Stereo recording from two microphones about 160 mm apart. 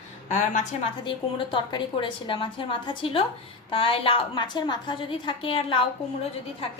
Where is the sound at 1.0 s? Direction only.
30° left (ahead or behind).